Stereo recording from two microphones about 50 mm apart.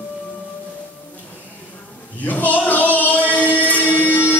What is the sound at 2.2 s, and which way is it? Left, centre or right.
Male singing, left.